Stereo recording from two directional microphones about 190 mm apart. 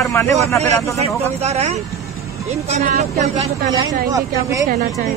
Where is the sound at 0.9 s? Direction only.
35° right (ahead or behind).